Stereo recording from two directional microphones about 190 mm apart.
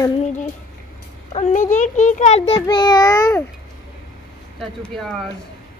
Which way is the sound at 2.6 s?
20° left (ahead or behind).